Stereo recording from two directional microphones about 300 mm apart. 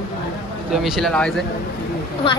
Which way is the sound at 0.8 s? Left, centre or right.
Centre.